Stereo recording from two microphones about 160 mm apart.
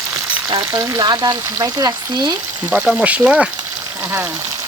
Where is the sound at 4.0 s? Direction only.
15° right (ahead or behind).